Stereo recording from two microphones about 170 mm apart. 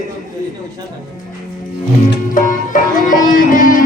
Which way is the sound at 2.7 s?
50° left (ahead or behind).